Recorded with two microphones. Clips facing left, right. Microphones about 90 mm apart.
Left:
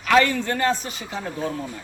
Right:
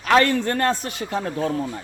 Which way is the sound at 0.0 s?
45° right (ahead or behind).